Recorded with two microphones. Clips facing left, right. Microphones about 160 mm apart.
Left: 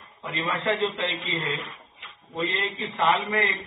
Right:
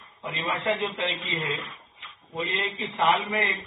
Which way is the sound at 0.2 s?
15° right (ahead or behind).